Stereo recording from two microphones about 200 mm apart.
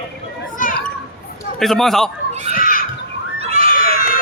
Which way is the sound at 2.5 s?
45° left (ahead or behind).